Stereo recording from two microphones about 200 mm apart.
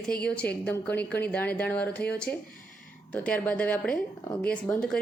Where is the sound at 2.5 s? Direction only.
45° left (ahead or behind).